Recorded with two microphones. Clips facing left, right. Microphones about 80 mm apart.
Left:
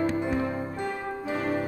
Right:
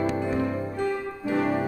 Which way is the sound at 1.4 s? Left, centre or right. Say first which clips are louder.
Right 4 dB; right.